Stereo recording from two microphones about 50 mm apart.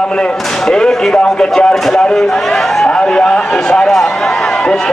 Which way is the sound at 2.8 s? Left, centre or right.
Centre.